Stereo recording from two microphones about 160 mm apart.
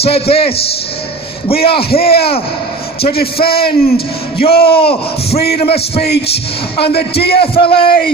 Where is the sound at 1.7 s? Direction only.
80° left.